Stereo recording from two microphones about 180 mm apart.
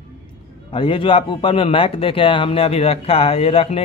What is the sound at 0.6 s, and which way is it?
A man's voice, 25° left (ahead or behind).